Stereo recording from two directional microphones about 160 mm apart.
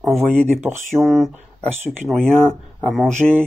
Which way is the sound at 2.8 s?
Centre (ahead or behind).